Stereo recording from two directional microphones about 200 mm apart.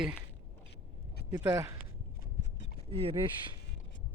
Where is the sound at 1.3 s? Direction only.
15° right (ahead or behind).